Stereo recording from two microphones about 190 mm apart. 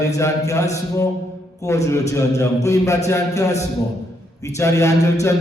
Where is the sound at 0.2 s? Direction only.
15° left (ahead or behind).